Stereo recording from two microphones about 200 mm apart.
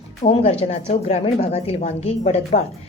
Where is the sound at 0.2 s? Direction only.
35° left (ahead or behind).